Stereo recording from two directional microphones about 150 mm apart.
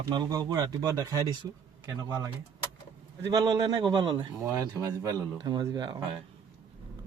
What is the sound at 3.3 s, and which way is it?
Speech, 30° right (ahead or behind).